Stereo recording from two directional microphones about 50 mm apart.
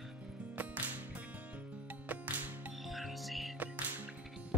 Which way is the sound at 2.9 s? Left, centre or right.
Centre.